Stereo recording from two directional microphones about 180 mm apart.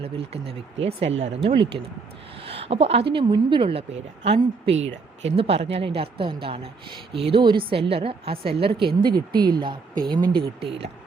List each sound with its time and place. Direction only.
0.8 s a woman's voice: 35° right (ahead or behind)
1.1 s speech: 85° right
2.5 s a woman's voice: 35° right (ahead or behind)
10.4 s speech: 65° right (ahead or behind)